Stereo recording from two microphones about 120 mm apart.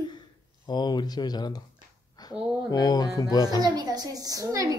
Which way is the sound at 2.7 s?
35° left (ahead or behind).